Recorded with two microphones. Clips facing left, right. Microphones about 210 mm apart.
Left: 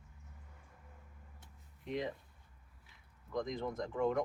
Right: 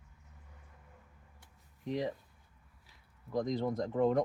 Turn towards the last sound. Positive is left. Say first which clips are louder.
# right 5 dB
turn(degrees=-35)  # may be behind; listen again after turning